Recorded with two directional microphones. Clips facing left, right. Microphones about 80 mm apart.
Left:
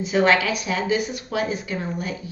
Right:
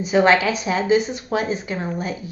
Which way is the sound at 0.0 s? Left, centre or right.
Right.